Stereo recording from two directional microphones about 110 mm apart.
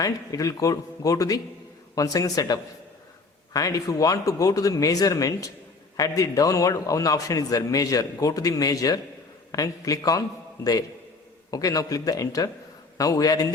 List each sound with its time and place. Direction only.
0.0 s a man's voice: 30° left (ahead or behind)